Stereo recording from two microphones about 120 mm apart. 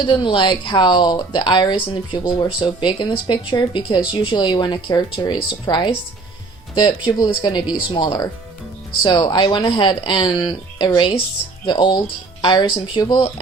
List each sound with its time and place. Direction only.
0.0 s speech: 40° left (ahead or behind)